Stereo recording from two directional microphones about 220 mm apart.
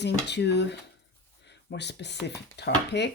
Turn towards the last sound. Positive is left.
turn(degrees=50)  # may be behind; listen again after turning